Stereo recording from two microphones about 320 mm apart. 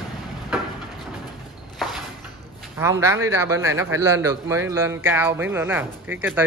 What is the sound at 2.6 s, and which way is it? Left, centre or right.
A man's voice, centre.